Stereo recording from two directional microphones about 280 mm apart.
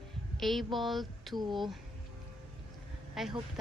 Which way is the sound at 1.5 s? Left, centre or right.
Centre.